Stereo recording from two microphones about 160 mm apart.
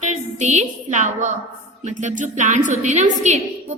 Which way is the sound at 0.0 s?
45° right (ahead or behind).